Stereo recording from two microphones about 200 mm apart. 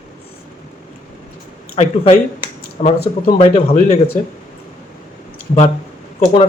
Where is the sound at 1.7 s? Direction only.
35° left (ahead or behind).